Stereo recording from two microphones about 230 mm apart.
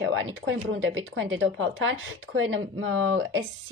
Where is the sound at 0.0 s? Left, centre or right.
Right.